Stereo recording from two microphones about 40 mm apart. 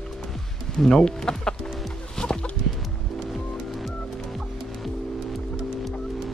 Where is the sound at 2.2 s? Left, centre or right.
Centre.